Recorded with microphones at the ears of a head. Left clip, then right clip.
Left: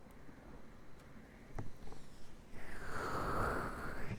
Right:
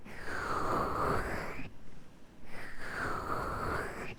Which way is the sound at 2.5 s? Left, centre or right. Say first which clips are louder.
Right 6 dB; right.